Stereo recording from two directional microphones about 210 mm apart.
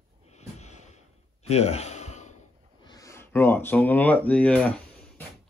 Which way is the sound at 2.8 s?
15° left (ahead or behind).